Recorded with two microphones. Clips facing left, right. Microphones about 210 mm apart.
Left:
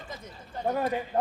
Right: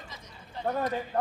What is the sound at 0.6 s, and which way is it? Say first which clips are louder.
Speech: left 2 dB; 10° left (ahead or behind).